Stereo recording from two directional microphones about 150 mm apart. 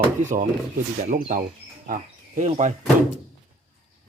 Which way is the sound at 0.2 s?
55° right (ahead or behind).